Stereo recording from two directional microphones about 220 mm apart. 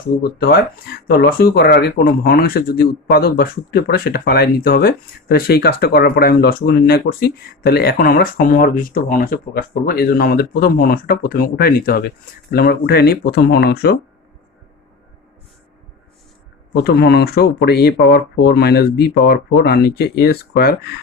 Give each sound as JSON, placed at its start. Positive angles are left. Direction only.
{"t": 0.2, "sound": "speech", "side_deg": 45}
{"t": 16.7, "sound": "speech", "side_deg": 45}